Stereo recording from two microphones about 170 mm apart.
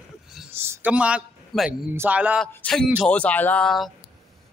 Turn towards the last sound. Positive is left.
turn(degrees=0)  # may be behind; listen again after turning